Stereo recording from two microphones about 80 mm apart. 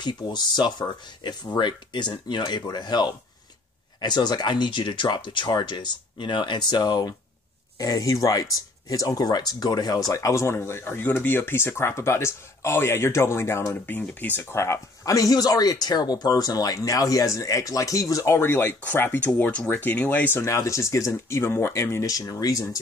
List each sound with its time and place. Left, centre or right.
0.2 s speech: left
13.8 s speech: left
18.4 s speech: left
20.4 s speech: left
22.0 s speech: left